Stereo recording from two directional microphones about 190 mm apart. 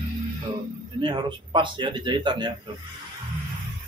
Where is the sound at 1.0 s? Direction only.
25° right (ahead or behind).